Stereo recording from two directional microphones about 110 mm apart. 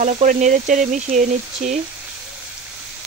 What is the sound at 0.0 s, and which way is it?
Speech, 90° right.